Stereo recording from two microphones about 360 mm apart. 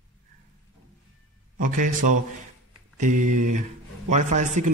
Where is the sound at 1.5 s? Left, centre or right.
Right.